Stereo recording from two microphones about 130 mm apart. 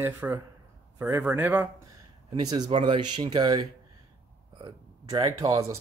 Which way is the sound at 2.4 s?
35° right (ahead or behind).